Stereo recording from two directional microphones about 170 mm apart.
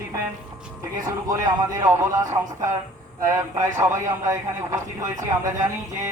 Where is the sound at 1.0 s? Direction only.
20° right (ahead or behind).